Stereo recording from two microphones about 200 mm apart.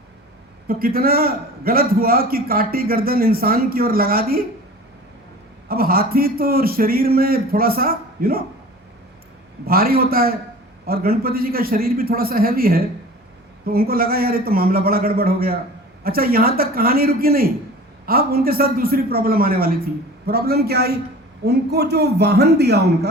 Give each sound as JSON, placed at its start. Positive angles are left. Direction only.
{"t": 0.7, "sound": "a man's voice", "side_deg": -50}
{"t": 5.6, "sound": "a man's voice", "side_deg": -50}
{"t": 9.6, "sound": "a man's voice", "side_deg": -50}